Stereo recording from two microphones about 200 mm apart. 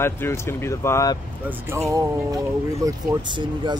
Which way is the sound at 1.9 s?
15° right (ahead or behind).